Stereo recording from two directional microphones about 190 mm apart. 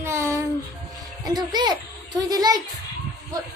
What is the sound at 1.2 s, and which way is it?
A child's voice, 20° right (ahead or behind).